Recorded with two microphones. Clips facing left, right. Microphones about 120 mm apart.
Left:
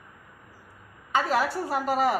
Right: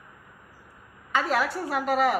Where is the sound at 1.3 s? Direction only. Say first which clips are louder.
Left 1 dB; 35° left (ahead or behind).